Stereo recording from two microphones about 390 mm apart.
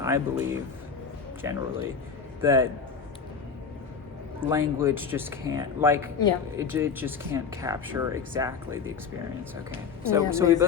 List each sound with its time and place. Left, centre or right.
0.0 s a man's voice: centre
4.4 s speech: centre
10.1 s speech: centre